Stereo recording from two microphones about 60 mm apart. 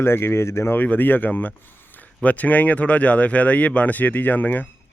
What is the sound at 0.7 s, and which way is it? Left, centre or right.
Speech, left.